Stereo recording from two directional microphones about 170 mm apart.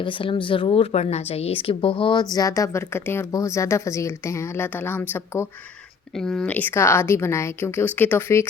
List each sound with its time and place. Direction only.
0.0 s speech: 30° left (ahead or behind)
2.3 s speech: 20° left (ahead or behind)
6.1 s speech: 5° left (ahead or behind)